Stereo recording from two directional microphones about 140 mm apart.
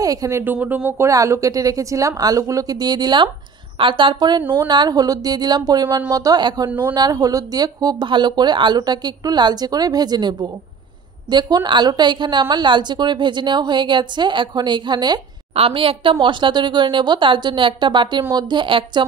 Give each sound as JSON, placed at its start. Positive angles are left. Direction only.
{"t": 0.0, "sound": "a woman's voice", "side_deg": -25}
{"t": 15.5, "sound": "a woman's voice", "side_deg": -40}